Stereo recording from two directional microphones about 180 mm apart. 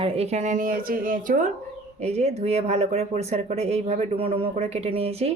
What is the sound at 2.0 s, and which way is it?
Speech, 35° right (ahead or behind).